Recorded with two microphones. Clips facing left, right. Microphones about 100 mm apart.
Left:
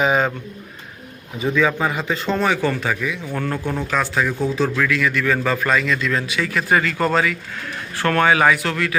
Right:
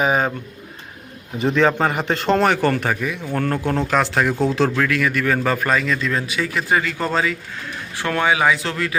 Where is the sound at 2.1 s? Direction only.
80° right; by 2.9 s 55° right (ahead or behind).